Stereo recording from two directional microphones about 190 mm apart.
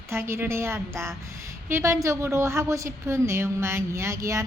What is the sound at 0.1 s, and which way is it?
A woman's voice, 15° right (ahead or behind).